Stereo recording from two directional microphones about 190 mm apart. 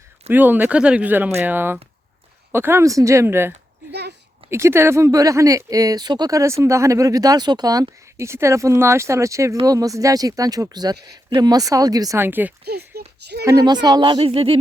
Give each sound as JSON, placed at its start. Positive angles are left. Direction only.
{"t": 0.3, "sound": "speech", "side_deg": -10}
{"t": 12.6, "sound": "speech", "side_deg": -55}
{"t": 13.4, "sound": "speech", "side_deg": -15}